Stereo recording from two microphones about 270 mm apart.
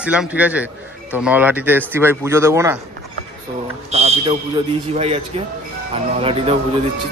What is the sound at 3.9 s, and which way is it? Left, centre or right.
Fire alarm, right.